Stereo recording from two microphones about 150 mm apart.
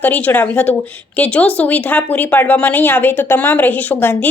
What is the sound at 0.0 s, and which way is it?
Speech, 10° left (ahead or behind).